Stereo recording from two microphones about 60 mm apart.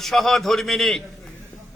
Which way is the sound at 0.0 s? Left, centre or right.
Centre.